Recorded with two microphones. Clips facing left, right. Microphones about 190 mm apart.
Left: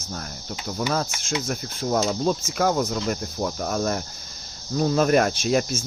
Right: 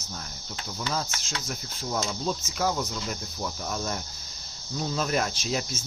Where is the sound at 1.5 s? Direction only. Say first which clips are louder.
Left 7 dB; 60° left (ahead or behind).